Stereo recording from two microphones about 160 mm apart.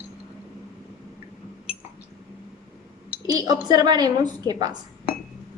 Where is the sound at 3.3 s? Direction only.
25° right (ahead or behind).